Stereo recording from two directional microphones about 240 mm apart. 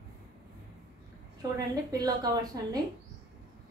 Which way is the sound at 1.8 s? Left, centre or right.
Centre.